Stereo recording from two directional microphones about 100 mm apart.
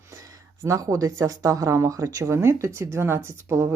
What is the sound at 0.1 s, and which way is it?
Speech, 30° right (ahead or behind).